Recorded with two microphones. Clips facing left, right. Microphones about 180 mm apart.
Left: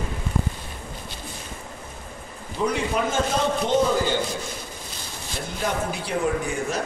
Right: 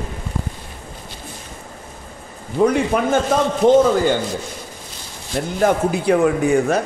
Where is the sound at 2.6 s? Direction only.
55° right (ahead or behind).